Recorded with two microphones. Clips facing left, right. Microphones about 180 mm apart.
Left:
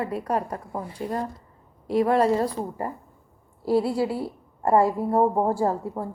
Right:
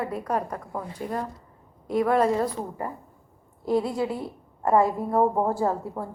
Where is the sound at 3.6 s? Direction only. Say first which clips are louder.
Left 2 dB; 5° left (ahead or behind).